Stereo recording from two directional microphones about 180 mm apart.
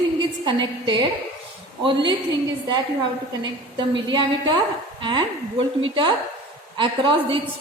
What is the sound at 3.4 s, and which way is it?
A woman's voice, 25° right (ahead or behind).